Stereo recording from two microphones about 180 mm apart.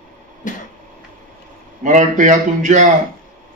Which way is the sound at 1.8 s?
45° right (ahead or behind).